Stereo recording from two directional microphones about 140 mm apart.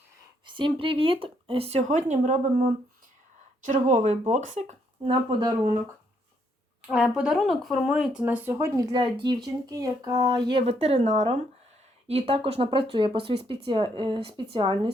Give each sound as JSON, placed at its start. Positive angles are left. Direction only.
{"t": 0.4, "sound": "speech", "side_deg": -35}
{"t": 1.9, "sound": "speech", "side_deg": -55}
{"t": 5.0, "sound": "speech", "side_deg": -35}
{"t": 6.8, "sound": "speech", "side_deg": -5}
{"t": 10.7, "sound": "speech", "side_deg": -50}